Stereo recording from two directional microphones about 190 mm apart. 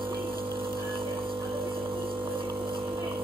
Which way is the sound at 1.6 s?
25° right (ahead or behind).